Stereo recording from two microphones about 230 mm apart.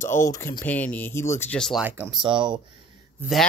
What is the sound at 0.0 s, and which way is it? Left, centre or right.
Speech, centre.